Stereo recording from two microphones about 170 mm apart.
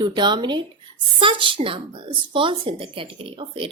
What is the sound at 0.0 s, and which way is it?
A woman's voice, 25° right (ahead or behind).